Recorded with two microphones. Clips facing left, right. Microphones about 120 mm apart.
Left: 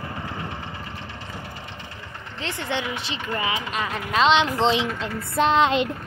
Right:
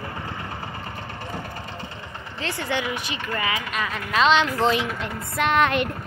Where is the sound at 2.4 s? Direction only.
20° left (ahead or behind).